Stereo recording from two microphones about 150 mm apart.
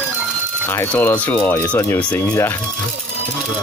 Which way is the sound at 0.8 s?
15° left (ahead or behind).